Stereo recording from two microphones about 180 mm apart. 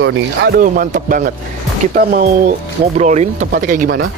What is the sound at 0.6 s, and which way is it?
Speech, 50° right (ahead or behind).